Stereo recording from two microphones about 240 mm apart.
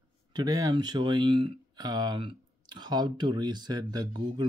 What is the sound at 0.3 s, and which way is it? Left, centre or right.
Speech, centre.